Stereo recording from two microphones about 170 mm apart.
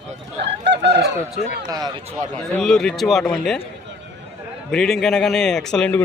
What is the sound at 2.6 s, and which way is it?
A man's voice, 5° left (ahead or behind).